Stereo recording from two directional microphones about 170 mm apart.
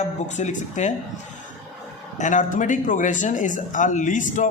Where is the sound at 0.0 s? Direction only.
45° left (ahead or behind).